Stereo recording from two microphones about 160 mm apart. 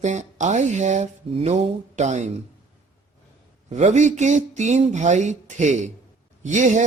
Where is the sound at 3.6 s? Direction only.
45° right (ahead or behind).